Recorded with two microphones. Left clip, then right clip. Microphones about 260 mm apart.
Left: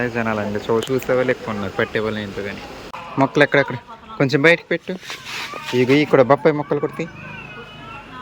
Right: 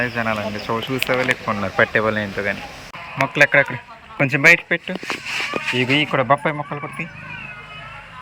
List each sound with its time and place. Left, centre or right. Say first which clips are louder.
0.0 s speech: even; centre
3.2 s speech: right 1 dB; centre